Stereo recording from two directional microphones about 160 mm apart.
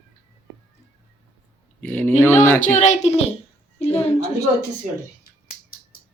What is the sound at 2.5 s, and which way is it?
Speech, 55° left (ahead or behind).